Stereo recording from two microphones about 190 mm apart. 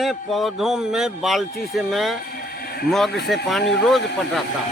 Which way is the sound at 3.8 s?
Centre (ahead or behind).